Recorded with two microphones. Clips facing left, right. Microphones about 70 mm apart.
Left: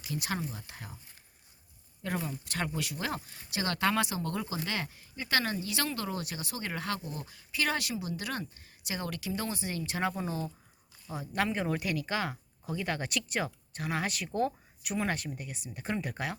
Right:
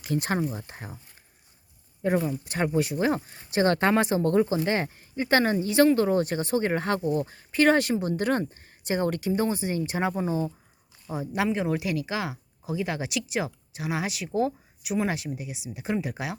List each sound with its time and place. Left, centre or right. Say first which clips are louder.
0.0 s speech: right 8 dB; right
0.5 s speech: right 7 dB; right
2.0 s speech: right 10 dB; right
11.3 s speech: right 4 dB; centre